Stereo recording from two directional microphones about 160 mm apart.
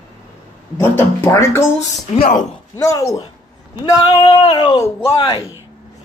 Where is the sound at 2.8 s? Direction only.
20° left (ahead or behind).